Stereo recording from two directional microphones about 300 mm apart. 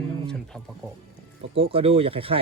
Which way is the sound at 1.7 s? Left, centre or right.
Centre.